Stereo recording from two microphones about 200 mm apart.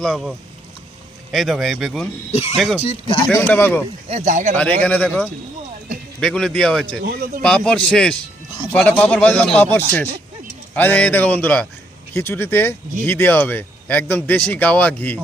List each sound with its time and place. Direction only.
0.0 s speech: centre (ahead or behind)
2.3 s speech: 30° left (ahead or behind)
2.6 s speech: centre (ahead or behind)
2.8 s speech: 30° left (ahead or behind)
3.3 s speech: 10° left (ahead or behind)
4.1 s speech: 35° right (ahead or behind)
4.5 s speech: 5° left (ahead or behind)
7.0 s speech: 50° right (ahead or behind)
7.4 s speech: 5° left (ahead or behind)